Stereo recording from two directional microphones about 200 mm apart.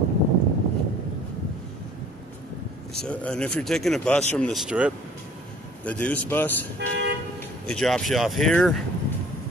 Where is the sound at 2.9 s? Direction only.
5° left (ahead or behind).